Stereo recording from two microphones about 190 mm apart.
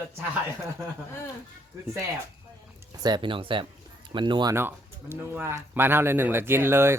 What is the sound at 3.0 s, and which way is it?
Speech, 25° right (ahead or behind).